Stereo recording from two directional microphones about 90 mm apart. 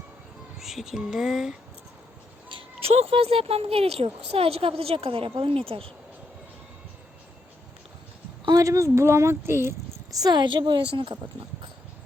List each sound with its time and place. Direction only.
0.6 s speech: 5° right (ahead or behind)
2.5 s speech: 80° right
8.4 s speech: 40° right (ahead or behind)
10.1 s a woman's voice: 45° right (ahead or behind); by 11.2 s 70° right (ahead or behind)